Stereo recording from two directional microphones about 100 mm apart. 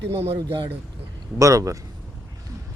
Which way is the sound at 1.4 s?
35° right (ahead or behind).